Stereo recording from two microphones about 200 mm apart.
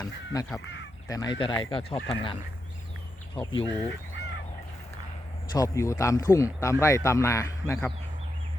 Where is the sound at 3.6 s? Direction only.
5° left (ahead or behind).